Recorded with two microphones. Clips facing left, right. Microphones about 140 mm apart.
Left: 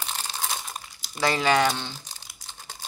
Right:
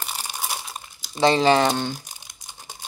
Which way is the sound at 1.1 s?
25° right (ahead or behind).